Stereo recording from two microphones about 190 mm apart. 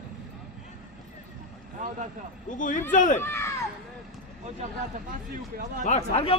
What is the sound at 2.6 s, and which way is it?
Speech, 40° left (ahead or behind).